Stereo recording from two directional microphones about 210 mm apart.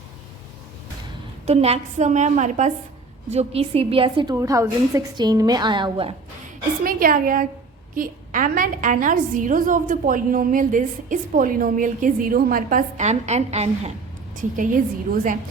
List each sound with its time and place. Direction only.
1.5 s a woman's voice: 30° right (ahead or behind)
6.8 s a woman's voice: 40° right (ahead or behind)